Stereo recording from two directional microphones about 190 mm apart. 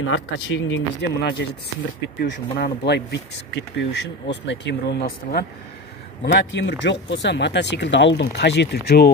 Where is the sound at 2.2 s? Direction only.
55° left (ahead or behind).